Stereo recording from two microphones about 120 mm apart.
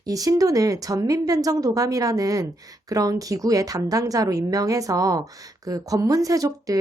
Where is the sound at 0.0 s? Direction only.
30° right (ahead or behind).